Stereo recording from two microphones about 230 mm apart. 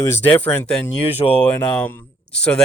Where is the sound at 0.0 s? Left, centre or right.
Centre.